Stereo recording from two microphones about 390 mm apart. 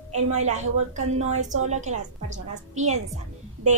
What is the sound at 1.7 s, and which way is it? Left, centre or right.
Speech, centre.